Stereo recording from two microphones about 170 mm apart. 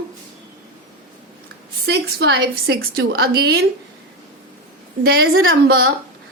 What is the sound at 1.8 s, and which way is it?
A woman's voice, 80° right.